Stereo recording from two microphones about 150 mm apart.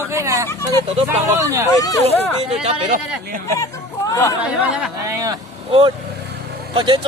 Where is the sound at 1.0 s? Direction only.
20° right (ahead or behind).